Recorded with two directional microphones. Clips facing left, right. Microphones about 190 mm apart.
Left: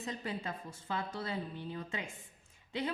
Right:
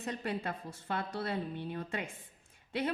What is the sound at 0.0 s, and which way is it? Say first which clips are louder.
A woman's voice: right 3 dB; 65° right (ahead or behind).